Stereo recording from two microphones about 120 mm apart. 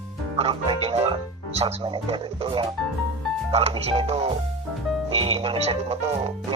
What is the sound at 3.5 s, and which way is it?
Speech, 60° right (ahead or behind).